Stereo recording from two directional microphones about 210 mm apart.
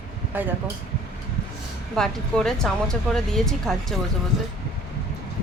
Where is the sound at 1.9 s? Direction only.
5° left (ahead or behind).